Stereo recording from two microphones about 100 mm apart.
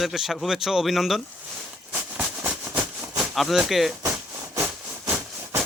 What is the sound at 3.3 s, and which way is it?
Speech, centre (ahead or behind).